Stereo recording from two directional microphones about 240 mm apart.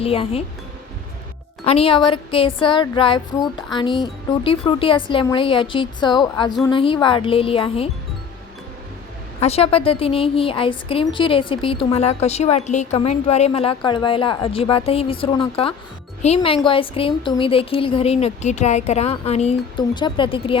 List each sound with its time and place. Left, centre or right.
0.0 s a woman's voice: left
1.6 s a woman's voice: left
9.4 s a woman's voice: left